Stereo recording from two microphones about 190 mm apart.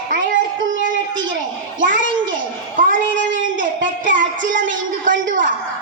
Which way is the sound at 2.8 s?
45° right (ahead or behind).